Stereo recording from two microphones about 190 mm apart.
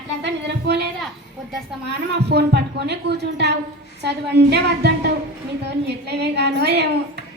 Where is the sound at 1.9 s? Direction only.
60° right (ahead or behind).